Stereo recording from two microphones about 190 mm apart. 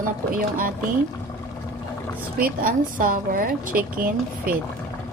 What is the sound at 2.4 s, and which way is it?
A woman's voice, 45° right (ahead or behind).